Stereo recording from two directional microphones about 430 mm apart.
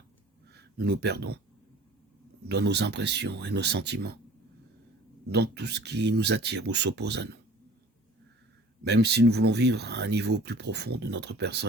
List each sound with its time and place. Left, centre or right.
0.4 s speech: right
2.5 s speech: right
5.3 s speech: right
8.8 s speech: right